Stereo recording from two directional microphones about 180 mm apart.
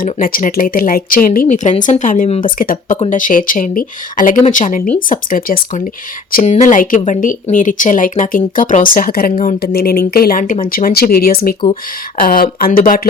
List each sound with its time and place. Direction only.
0.0 s speech: 50° left (ahead or behind)